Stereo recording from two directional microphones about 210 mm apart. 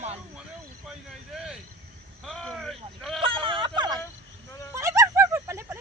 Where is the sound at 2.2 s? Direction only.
Centre (ahead or behind).